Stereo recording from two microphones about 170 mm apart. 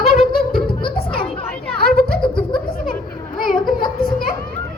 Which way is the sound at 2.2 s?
30° left (ahead or behind).